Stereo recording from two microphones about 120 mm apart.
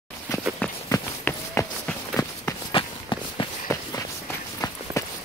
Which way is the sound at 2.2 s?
30° left (ahead or behind).